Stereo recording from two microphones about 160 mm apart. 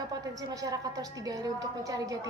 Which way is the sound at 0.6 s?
20° right (ahead or behind).